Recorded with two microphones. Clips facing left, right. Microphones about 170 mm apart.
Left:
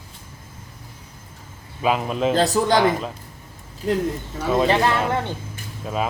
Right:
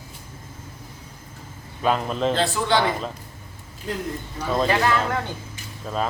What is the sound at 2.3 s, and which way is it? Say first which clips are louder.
Speech: left 4 dB; 40° left (ahead or behind).